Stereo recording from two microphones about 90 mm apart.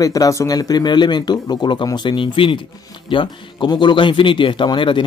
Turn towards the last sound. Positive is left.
turn(degrees=65)  # may be behind; listen again after turning